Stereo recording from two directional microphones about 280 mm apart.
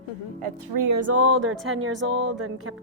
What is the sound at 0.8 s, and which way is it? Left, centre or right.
Speech, right.